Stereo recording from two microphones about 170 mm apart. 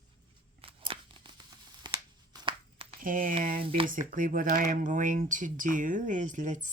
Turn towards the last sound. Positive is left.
turn(degrees=-50)  # may be behind; listen again after turning